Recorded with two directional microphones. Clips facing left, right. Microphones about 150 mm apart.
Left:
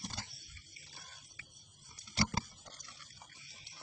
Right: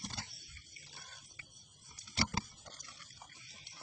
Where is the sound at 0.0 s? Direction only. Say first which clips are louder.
Left 1 dB; centre (ahead or behind).